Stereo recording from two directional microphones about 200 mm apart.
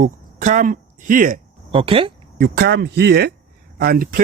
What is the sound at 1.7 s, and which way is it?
Speech, 25° right (ahead or behind).